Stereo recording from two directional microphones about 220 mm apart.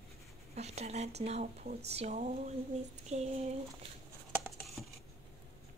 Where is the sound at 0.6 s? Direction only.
30° right (ahead or behind).